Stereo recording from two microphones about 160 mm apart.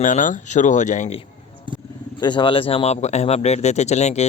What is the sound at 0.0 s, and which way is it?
Speech, 55° left (ahead or behind).